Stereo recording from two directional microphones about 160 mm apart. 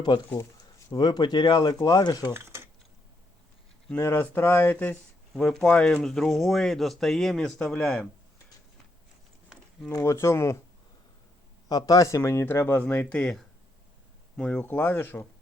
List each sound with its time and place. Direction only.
0.1 s speech: 30° left (ahead or behind)
2.3 s a sound: 15° right (ahead or behind)
3.8 s speech: 10° left (ahead or behind)
9.9 s speech: 20° left (ahead or behind)
11.7 s speech: 25° left (ahead or behind)